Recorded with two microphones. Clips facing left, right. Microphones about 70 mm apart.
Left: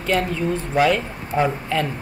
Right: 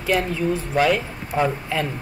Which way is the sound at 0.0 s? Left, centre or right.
Centre.